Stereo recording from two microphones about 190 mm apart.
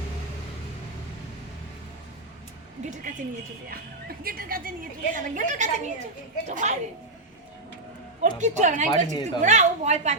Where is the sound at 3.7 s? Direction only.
50° right (ahead or behind).